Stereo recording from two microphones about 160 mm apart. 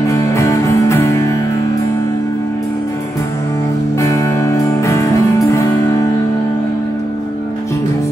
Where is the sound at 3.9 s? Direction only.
20° left (ahead or behind).